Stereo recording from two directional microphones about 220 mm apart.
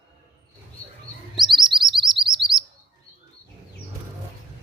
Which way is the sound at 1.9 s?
20° right (ahead or behind).